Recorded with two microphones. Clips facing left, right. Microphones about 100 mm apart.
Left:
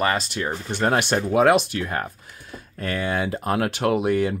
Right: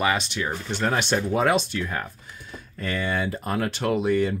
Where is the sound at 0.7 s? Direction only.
50° left (ahead or behind).